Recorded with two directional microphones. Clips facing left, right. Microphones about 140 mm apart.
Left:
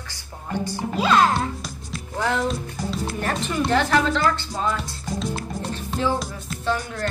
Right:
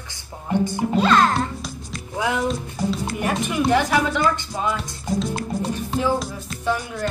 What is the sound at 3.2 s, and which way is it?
Music, 10° right (ahead or behind).